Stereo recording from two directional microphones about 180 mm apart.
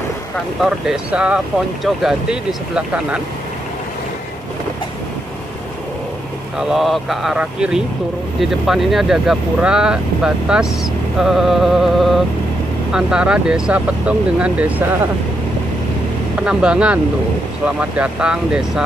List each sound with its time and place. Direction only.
0.6 s speech: 5° right (ahead or behind)
6.7 s speech: centre (ahead or behind)
16.3 s speech: 5° right (ahead or behind)